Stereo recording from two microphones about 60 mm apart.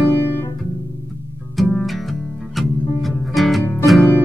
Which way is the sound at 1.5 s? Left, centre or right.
Centre.